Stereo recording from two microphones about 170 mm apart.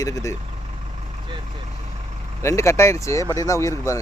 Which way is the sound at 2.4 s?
15° left (ahead or behind).